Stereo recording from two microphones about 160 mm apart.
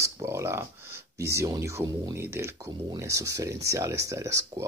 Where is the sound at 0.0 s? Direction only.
15° right (ahead or behind).